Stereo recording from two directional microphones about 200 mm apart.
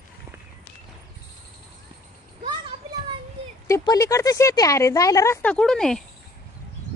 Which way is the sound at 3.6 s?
15° left (ahead or behind).